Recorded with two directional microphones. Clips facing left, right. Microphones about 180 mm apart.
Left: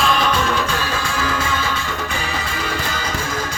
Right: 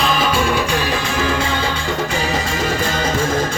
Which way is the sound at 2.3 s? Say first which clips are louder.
Right 5 dB; 45° right (ahead or behind).